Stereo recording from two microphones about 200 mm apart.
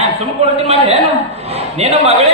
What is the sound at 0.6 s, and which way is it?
Brass instrument, 30° right (ahead or behind).